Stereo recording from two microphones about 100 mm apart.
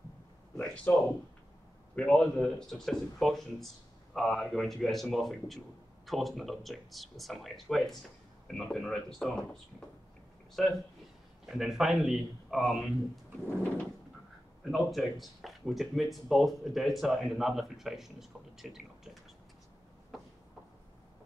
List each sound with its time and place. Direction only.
0.9 s speech: 20° left (ahead or behind)
2.0 s speech: 10° left (ahead or behind)
10.6 s speech: centre (ahead or behind)
14.6 s speech: centre (ahead or behind)